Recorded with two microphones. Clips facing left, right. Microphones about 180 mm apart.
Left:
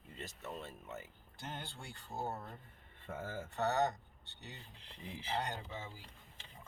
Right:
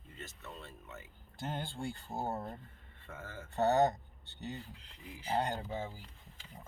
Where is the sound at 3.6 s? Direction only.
50° right (ahead or behind).